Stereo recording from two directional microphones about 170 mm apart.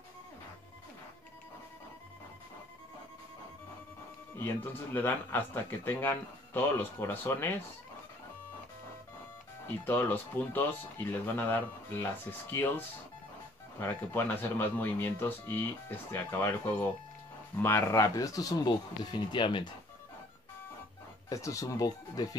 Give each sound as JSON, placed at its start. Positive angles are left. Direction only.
{"t": 4.9, "sound": "speech", "side_deg": 15}
{"t": 9.7, "sound": "speech", "side_deg": 10}
{"t": 17.6, "sound": "speech", "side_deg": 10}
{"t": 21.3, "sound": "speech", "side_deg": 20}